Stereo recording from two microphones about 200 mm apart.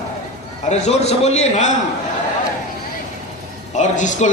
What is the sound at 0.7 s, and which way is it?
Speech, 35° left (ahead or behind).